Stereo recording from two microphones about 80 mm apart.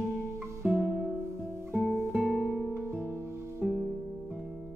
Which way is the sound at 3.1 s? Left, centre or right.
Right.